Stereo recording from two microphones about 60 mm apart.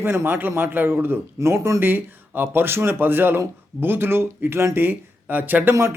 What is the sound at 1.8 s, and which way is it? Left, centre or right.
Speech, right.